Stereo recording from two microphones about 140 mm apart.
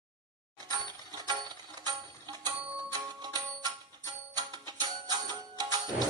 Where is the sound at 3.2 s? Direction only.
30° right (ahead or behind).